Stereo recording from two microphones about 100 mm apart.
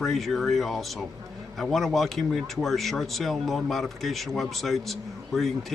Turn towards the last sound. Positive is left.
turn(degrees=0)  # may be behind; listen again after turning